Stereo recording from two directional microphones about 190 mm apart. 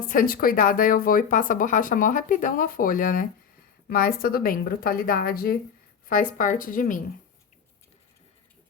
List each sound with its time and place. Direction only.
0.0 s speech: 45° left (ahead or behind)